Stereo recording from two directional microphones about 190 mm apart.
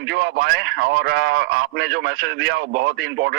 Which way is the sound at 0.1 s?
60° right (ahead or behind).